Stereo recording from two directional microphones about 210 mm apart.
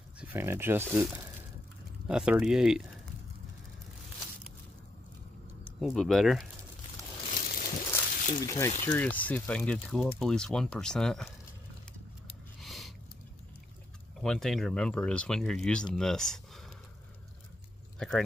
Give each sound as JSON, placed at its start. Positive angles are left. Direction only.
{"t": 0.2, "sound": "speech", "side_deg": -10}
{"t": 5.6, "sound": "speech", "side_deg": 0}
{"t": 7.3, "sound": "a sound", "side_deg": 40}
{"t": 8.4, "sound": "speech", "side_deg": 15}
{"t": 12.5, "sound": "a sound", "side_deg": 0}
{"t": 14.2, "sound": "speech", "side_deg": 5}
{"t": 17.9, "sound": "speech", "side_deg": 5}